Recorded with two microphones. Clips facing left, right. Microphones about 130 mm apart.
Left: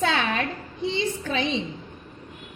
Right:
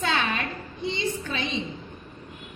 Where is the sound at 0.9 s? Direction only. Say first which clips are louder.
Left 4 dB; 90° left.